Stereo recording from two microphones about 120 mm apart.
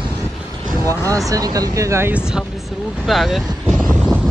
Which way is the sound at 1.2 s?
30° right (ahead or behind).